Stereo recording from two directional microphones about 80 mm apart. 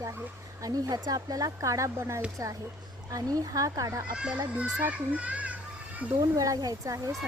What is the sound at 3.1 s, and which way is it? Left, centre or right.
Speech, right.